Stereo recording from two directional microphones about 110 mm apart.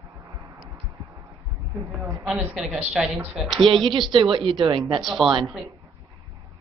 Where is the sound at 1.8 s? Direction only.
30° right (ahead or behind).